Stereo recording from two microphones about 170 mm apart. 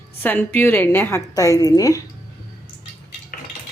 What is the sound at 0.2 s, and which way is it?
A woman's voice, 10° left (ahead or behind).